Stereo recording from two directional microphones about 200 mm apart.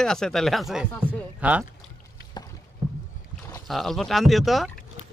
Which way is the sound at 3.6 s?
Centre (ahead or behind).